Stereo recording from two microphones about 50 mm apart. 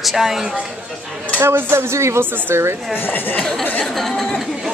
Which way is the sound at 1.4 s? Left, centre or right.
Right.